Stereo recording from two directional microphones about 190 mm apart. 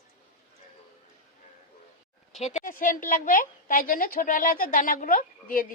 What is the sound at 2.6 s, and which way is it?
A woman's voice, 45° left (ahead or behind).